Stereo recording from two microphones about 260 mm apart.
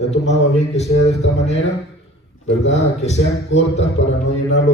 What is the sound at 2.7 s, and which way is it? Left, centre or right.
A man's voice, left.